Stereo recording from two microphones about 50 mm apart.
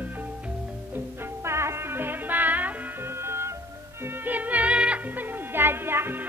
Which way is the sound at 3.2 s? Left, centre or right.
Right.